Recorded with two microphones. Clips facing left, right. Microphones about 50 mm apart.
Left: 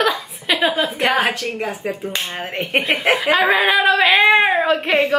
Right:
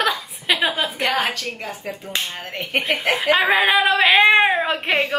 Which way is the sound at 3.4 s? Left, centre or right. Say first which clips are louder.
Left 1 dB; centre.